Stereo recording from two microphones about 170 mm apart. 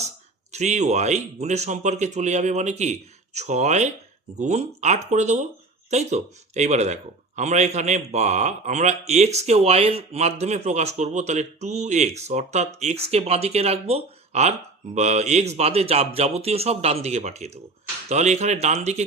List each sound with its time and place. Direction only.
0.5 s speech: 45° right (ahead or behind)